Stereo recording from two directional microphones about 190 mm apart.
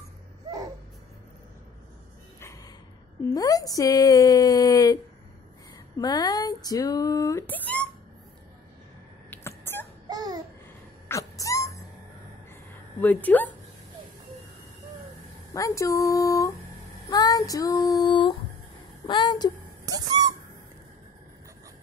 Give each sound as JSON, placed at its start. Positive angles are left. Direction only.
{"t": 2.4, "sound": "gasp", "side_deg": 15}
{"t": 3.3, "sound": "speech", "side_deg": 20}
{"t": 5.9, "sound": "speech", "side_deg": 20}
{"t": 9.7, "sound": "child singing", "side_deg": 10}
{"t": 10.0, "sound": "babbling", "side_deg": -20}
{"t": 11.1, "sound": "a sound", "side_deg": 15}
{"t": 13.0, "sound": "speech", "side_deg": 10}
{"t": 15.5, "sound": "speech", "side_deg": 15}
{"t": 19.9, "sound": "owl", "side_deg": -20}